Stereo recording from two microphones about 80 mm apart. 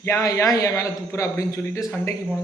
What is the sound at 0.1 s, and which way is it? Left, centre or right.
A man's voice, left.